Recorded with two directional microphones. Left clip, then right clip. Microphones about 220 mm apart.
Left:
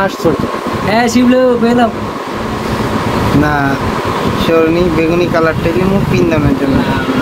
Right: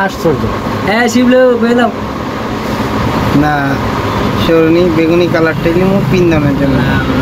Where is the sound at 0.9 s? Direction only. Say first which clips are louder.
Even; 15° left (ahead or behind).